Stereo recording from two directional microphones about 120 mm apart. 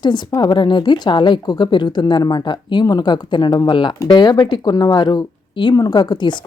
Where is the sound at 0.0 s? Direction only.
40° left (ahead or behind).